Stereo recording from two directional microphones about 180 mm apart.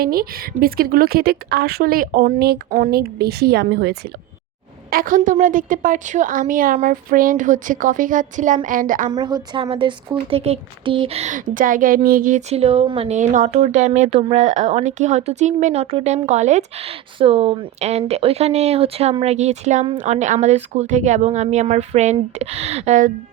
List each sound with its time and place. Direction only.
0.0 s speech: 55° right (ahead or behind)
4.9 s speech: 50° right (ahead or behind)
9.1 s speech: 25° right (ahead or behind); by 23.1 s 40° right (ahead or behind)